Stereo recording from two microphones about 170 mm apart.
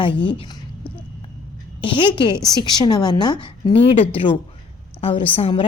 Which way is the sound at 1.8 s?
30° left (ahead or behind).